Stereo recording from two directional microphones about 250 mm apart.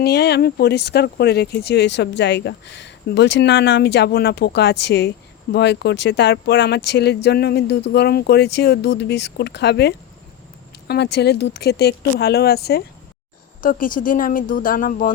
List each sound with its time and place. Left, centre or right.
0.0 s speech: left